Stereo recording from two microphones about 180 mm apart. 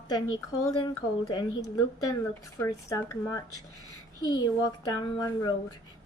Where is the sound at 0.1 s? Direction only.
20° left (ahead or behind).